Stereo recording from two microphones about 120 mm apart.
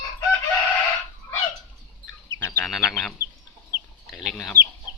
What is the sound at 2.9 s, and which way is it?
Bird, centre (ahead or behind).